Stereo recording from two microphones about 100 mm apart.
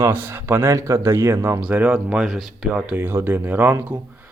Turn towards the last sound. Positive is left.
turn(degrees=-20)  # may be behind; listen again after turning